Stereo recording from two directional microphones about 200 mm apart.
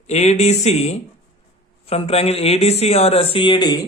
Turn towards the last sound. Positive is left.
turn(degrees=20)  # may be behind; listen again after turning